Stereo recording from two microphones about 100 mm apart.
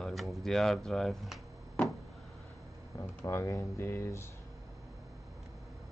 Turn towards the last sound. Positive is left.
turn(degrees=25)  # may be behind; listen again after turning